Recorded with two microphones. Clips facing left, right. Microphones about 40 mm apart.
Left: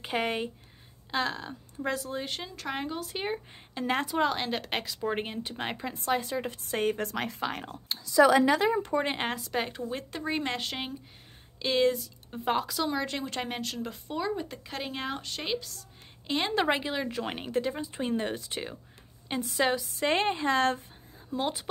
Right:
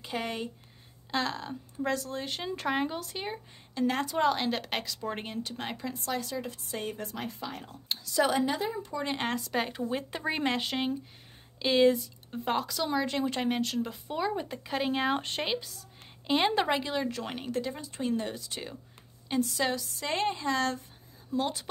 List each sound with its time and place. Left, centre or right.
0.0 s speech: left
1.1 s a woman's voice: centre
3.1 s speech: left
4.1 s a woman's voice: centre; by 7.7 s left
8.4 s a woman's voice: left
9.2 s a woman's voice: centre
15.1 s speech: right
15.4 s a woman's voice: centre
16.6 s speech: centre
20.1 s a woman's voice: left
21.3 s a woman's voice: centre